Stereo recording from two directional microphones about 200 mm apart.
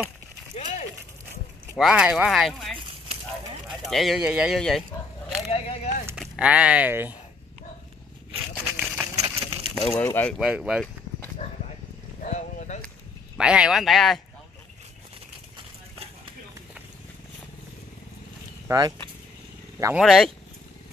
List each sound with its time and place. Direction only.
1.8 s speech: 5° right (ahead or behind)
3.9 s speech: centre (ahead or behind)
5.5 s a sound: 35° left (ahead or behind)
6.1 s speech: 5° right (ahead or behind)
8.7 s a sound: 10° right (ahead or behind)
9.8 s speech: centre (ahead or behind)
10.4 s speech: 5° right (ahead or behind)
12.2 s a sound: 35° left (ahead or behind)
13.4 s speech: 5° right (ahead or behind)
18.7 s speech: 20° right (ahead or behind)
20.0 s speech: centre (ahead or behind)